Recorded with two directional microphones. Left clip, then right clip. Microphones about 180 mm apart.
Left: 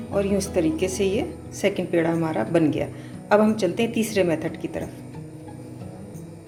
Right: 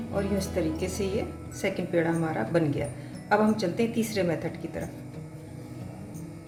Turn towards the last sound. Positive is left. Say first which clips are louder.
# left 6 dB
turn(degrees=40)  # may be behind; listen again after turning